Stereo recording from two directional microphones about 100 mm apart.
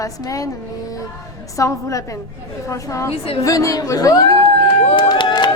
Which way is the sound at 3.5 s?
35° left (ahead or behind).